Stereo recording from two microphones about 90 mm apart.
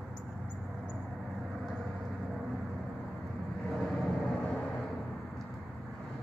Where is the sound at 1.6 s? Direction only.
5° right (ahead or behind).